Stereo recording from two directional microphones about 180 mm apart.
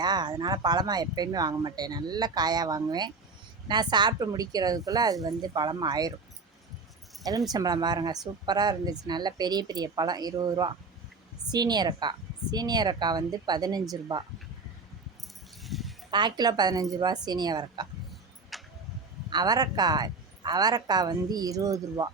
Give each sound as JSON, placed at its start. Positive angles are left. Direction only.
{"t": 0.0, "sound": "speech", "side_deg": -25}
{"t": 7.5, "sound": "speech", "side_deg": -20}
{"t": 15.6, "sound": "a sound", "side_deg": 0}
{"t": 16.1, "sound": "speech", "side_deg": -25}
{"t": 18.5, "sound": "a sound", "side_deg": 0}
{"t": 19.3, "sound": "speech", "side_deg": -20}